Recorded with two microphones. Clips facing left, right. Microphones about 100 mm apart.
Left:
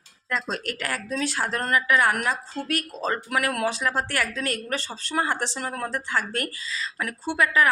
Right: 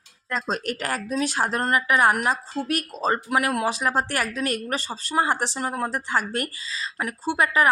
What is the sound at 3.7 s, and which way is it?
A woman's voice, 15° right (ahead or behind).